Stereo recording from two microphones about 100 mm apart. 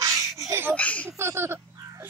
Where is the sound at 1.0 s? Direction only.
25° right (ahead or behind).